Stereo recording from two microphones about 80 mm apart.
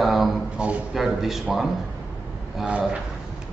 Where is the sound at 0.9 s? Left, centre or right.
Centre.